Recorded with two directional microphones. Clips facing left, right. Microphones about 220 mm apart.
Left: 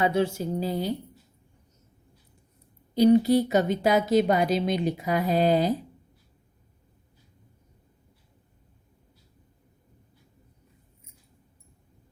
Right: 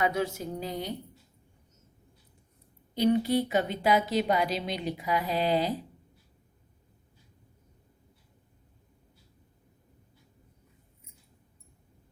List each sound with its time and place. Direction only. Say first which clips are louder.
0.0 s a woman's voice: left 5 dB; 30° left (ahead or behind)
2.9 s speech: left 6 dB; 40° left (ahead or behind)